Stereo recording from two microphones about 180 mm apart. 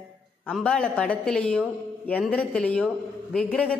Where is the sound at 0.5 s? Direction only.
5° left (ahead or behind).